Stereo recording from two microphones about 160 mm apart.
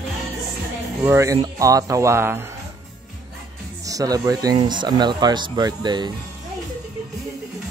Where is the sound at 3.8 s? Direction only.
20° right (ahead or behind).